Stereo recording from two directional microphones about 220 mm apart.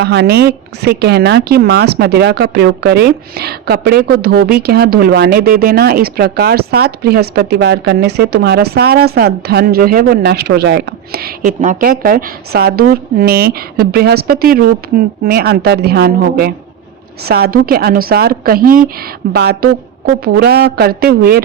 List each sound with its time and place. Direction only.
0.0 s a woman's voice: 50° right (ahead or behind)